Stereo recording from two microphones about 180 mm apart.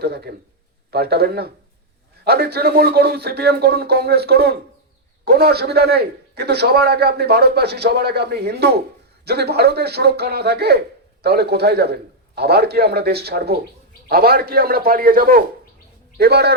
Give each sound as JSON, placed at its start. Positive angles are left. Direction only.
{"t": 0.0, "sound": "speech", "side_deg": -60}